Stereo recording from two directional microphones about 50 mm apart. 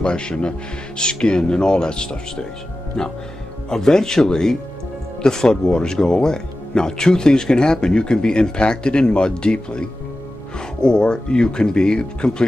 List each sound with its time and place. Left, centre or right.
0.0 s speech: centre